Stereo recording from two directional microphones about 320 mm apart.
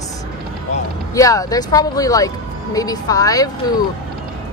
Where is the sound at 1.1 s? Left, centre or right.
Centre.